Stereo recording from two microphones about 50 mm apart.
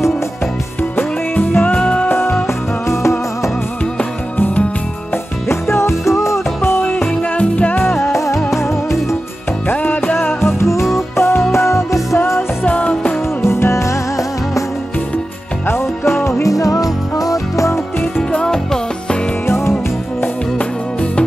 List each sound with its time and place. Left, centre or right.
0.9 s music: left
2.4 s music: left
5.5 s music: left
7.3 s music: left
7.8 s music: left
8.1 s music: left
9.7 s music: left
10.1 s music: left
12.6 s music: left
13.4 s music: left
15.6 s music: left
16.4 s music: left
18.3 s music: centre
19.4 s music: left